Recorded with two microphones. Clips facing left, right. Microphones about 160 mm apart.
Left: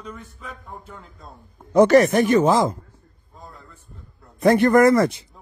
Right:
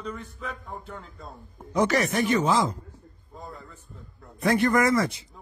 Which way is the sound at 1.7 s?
55° left (ahead or behind).